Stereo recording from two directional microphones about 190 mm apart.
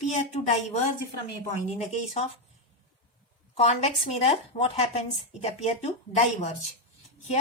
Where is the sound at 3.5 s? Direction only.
35° left (ahead or behind).